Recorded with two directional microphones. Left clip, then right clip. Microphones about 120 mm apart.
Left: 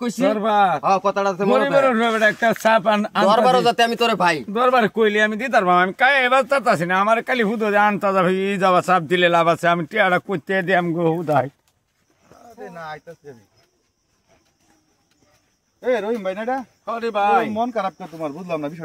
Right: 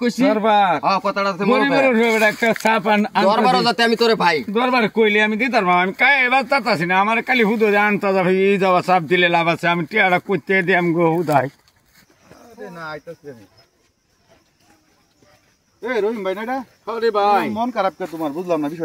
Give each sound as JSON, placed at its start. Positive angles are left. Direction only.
{"t": 0.0, "sound": "speech", "side_deg": 40}
{"t": 11.2, "sound": "speech", "side_deg": 0}
{"t": 16.0, "sound": "speech", "side_deg": 45}